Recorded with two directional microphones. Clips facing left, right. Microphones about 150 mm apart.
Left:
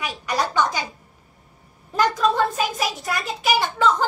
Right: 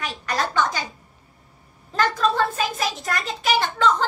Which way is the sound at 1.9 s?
10° left (ahead or behind).